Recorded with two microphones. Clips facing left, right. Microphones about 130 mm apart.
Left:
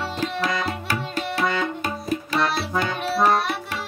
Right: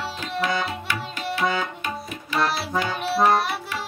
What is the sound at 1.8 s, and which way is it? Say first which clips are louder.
Tabla: left 5 dB; 35° left (ahead or behind).